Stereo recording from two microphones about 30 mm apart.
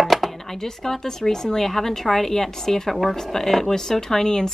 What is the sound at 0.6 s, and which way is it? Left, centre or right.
Speech, centre.